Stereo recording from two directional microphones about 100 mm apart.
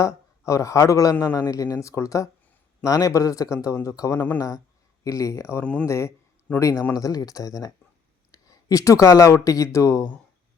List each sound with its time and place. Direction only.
0.0 s speech: 30° left (ahead or behind)
6.5 s speech: 15° left (ahead or behind)
6.9 s speech: 40° left (ahead or behind)